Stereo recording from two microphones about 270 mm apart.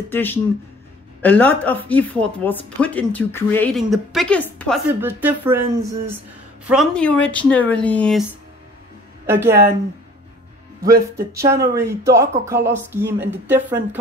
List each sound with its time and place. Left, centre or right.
0.1 s speech: centre
5.0 s speech: centre
6.7 s speech: centre
9.2 s speech: centre
10.8 s speech: right
11.6 s speech: centre